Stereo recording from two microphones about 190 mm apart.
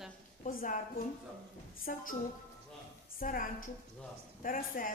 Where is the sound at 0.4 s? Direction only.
45° left (ahead or behind).